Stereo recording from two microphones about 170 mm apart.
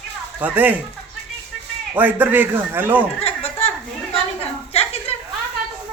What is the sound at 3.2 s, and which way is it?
Chuckle, 35° left (ahead or behind).